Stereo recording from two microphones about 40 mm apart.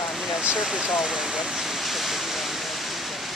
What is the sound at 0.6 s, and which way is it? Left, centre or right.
Speech, centre.